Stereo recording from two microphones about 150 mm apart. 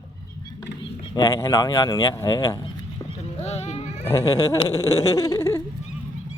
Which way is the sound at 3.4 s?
45° left (ahead or behind).